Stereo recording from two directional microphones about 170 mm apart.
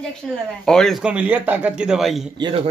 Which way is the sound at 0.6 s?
5° left (ahead or behind).